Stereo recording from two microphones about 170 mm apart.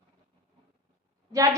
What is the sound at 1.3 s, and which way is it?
Speech, 20° right (ahead or behind).